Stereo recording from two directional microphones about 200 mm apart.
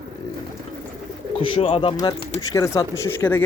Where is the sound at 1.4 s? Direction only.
30° left (ahead or behind).